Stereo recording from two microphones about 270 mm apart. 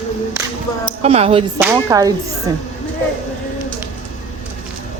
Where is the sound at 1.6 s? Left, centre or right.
Centre.